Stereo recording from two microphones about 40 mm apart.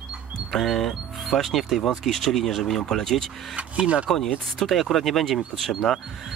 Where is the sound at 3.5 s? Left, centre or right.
Right.